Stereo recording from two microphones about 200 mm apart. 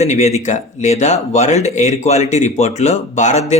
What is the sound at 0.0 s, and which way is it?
Speech, 35° left (ahead or behind).